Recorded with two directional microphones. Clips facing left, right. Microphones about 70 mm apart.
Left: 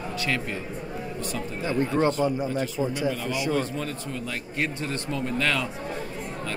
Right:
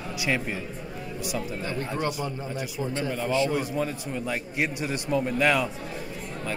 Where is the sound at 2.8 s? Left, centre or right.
Centre.